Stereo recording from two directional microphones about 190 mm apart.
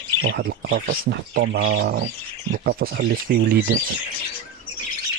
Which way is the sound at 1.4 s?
65° right (ahead or behind).